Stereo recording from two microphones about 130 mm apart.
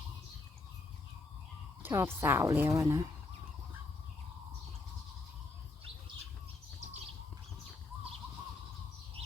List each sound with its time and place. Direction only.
1.8 s a woman's voice: 20° right (ahead or behind)